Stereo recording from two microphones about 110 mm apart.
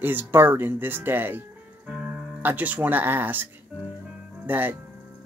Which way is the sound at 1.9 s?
10° right (ahead or behind).